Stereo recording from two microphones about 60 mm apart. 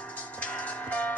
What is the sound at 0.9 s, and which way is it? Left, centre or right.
Music, left.